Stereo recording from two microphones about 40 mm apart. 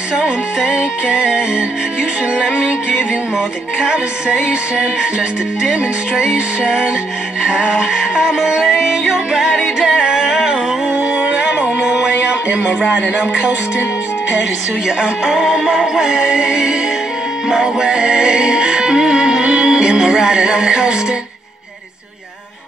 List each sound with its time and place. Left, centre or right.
0.6 s music: right
8.6 s music: centre
10.2 s a sound: centre
11.1 s music: right
12.4 s speech: right
15.2 s music: centre